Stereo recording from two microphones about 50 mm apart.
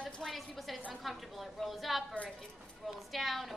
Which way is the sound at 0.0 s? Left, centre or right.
Centre.